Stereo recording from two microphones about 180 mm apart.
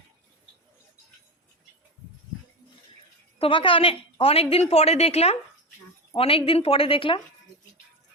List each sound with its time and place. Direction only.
3.3 s a woman's voice: 30° left (ahead or behind)